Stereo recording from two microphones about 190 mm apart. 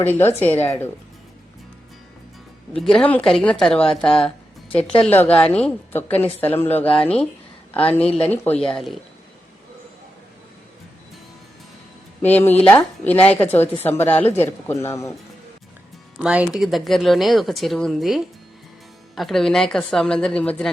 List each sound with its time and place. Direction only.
0.0 s speech: 10° left (ahead or behind)
2.7 s speech: 5° left (ahead or behind)
7.8 s a woman's voice: 30° left (ahead or behind)
8.1 s speech: 5° left (ahead or behind)
12.2 s speech: 10° left (ahead or behind)
16.1 s speech: 5° right (ahead or behind)